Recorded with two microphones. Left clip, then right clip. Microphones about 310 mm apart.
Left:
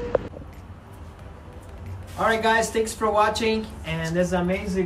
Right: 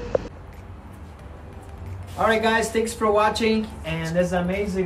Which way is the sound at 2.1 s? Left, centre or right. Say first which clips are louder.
Right 1 dB; centre.